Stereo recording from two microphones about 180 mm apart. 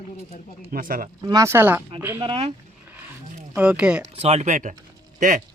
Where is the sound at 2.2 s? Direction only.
30° right (ahead or behind).